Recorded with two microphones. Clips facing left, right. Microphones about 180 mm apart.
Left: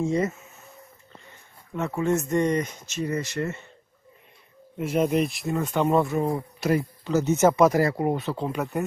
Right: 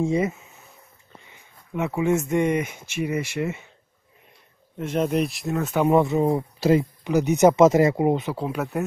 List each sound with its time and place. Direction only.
0.0 s speech: 15° right (ahead or behind)
4.7 s speech: 5° left (ahead or behind); by 6.0 s 10° right (ahead or behind)
6.0 s speech: 25° right (ahead or behind)
8.4 s speech: 5° right (ahead or behind)